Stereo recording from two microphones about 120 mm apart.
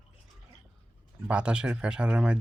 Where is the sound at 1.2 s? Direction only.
10° right (ahead or behind).